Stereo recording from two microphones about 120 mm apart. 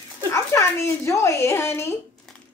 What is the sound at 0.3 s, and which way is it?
Speech, 20° left (ahead or behind).